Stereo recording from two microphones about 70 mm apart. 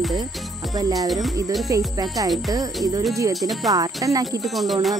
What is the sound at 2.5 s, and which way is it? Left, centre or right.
Speech, right.